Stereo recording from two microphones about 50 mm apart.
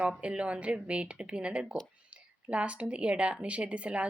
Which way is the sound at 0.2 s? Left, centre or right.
Right.